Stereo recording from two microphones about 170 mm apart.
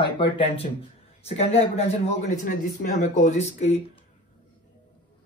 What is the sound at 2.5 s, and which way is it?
Speech, 50° left (ahead or behind).